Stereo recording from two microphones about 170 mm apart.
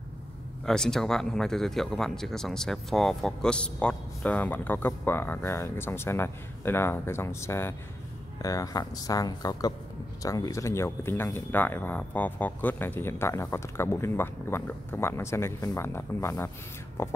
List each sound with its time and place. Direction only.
0.7 s speech: 5° left (ahead or behind)